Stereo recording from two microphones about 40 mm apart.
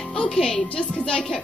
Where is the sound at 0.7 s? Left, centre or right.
Left.